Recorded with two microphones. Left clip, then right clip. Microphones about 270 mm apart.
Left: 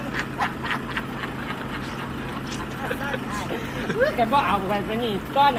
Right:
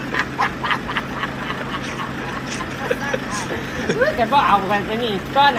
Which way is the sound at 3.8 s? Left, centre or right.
Centre.